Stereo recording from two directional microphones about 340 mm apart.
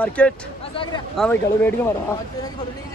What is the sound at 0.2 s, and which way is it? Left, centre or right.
Speech, centre.